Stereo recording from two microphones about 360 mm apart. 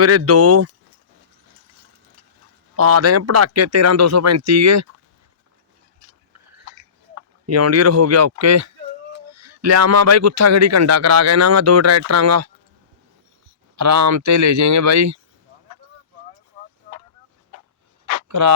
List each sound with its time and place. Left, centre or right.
0.0 s speech: right
2.7 s a man's voice: right
7.2 s a man's voice: right
13.7 s a man's voice: right
16.6 s a sound: right
18.0 s a sound: right